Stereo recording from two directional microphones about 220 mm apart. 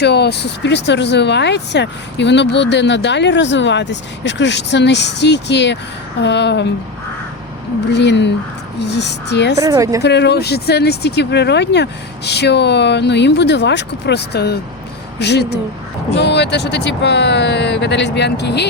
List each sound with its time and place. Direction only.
0.0 s speech: 50° left (ahead or behind)
7.9 s speech: 50° left (ahead or behind)
9.6 s a woman's voice: 15° right (ahead or behind)
10.0 s speech: 50° left (ahead or behind)